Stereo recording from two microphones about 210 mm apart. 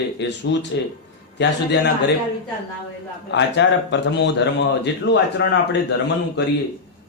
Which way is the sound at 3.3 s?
55° left (ahead or behind).